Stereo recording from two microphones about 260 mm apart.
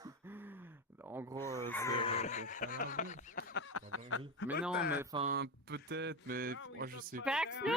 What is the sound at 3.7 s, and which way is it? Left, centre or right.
Speech, left.